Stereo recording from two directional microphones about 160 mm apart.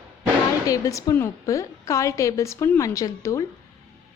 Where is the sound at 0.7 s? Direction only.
20° left (ahead or behind).